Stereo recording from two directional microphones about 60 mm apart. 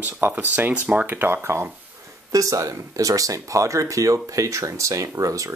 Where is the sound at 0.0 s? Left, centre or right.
Right.